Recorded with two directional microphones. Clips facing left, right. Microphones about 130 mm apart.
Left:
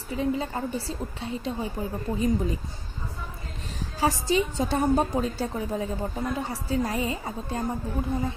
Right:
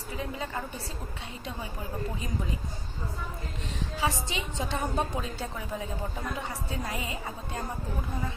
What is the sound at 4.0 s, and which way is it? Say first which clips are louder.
A woman's voice: left 8 dB; 40° left (ahead or behind).